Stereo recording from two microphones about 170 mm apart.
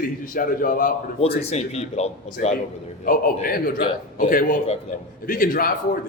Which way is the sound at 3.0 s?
55° left (ahead or behind).